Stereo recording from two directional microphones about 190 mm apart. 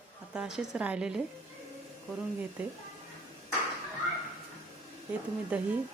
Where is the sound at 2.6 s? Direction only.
5° right (ahead or behind).